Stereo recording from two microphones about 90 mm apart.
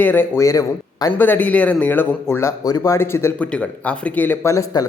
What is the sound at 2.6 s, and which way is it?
Speech, 45° left (ahead or behind).